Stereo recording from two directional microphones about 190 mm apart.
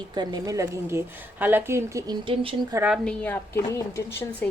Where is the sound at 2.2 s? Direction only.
25° right (ahead or behind).